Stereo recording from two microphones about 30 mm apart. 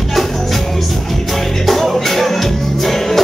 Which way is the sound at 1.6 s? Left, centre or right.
Centre.